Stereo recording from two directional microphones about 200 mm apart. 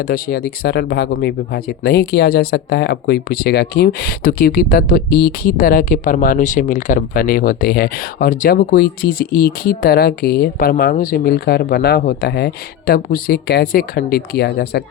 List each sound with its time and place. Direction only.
0.0 s speech: 50° left (ahead or behind)